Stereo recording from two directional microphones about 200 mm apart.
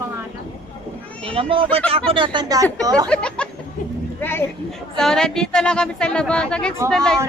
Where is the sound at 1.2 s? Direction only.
25° right (ahead or behind).